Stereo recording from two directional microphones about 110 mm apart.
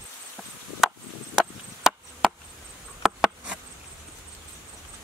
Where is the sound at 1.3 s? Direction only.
Centre (ahead or behind).